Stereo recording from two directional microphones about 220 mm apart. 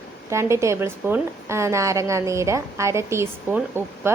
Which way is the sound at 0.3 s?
15° right (ahead or behind).